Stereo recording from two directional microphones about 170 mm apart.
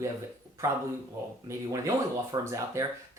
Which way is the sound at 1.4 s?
20° right (ahead or behind).